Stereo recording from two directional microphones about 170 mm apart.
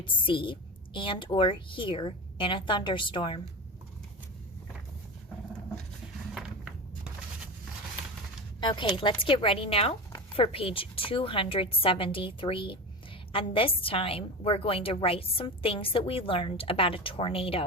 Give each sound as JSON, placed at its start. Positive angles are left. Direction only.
{"t": 0.0, "sound": "a woman's voice", "side_deg": 30}
{"t": 6.3, "sound": "a sound", "side_deg": -5}
{"t": 8.6, "sound": "a woman's voice", "side_deg": 30}